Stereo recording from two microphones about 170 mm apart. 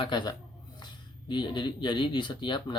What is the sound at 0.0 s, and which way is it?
Speech, 25° left (ahead or behind).